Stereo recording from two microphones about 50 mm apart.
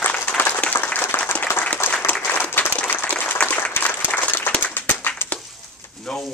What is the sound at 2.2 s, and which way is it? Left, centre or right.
Applause, left.